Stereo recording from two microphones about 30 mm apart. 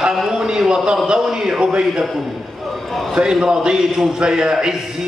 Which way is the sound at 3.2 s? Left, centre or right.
Right.